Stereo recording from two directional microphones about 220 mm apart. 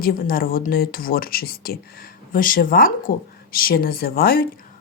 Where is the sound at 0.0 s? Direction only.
40° left (ahead or behind).